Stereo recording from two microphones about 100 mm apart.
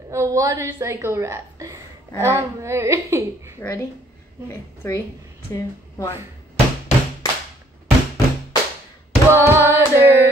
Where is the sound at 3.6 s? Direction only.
20° left (ahead or behind).